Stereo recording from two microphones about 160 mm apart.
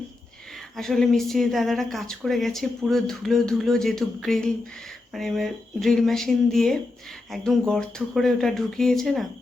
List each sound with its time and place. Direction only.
0.8 s speech: 5° left (ahead or behind)